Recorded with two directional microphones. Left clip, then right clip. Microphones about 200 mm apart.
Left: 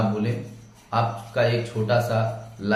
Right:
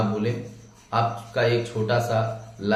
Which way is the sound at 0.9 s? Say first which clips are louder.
Even; 10° right (ahead or behind).